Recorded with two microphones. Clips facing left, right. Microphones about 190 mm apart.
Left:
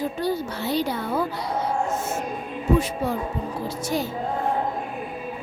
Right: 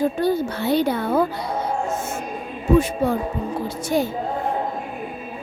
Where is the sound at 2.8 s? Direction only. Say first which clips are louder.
Right 5 dB; 50° right (ahead or behind).